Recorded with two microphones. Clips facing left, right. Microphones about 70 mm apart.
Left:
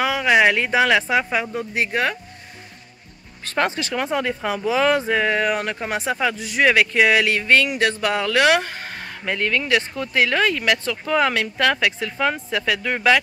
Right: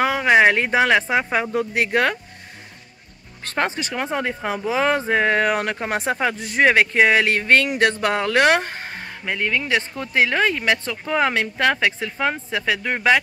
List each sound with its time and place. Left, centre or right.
0.0 s speech: right
1.6 s speech: right
3.5 s speech: right
8.8 s a sound: right
9.2 s speech: centre
9.8 s speech: right